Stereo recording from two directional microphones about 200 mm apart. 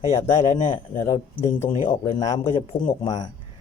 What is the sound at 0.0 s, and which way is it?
Speech, 35° left (ahead or behind).